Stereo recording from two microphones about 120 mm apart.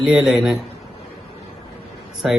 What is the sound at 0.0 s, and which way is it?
Speech, 5° right (ahead or behind).